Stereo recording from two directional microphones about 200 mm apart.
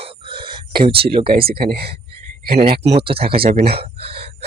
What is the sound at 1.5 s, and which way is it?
Speech, 50° right (ahead or behind).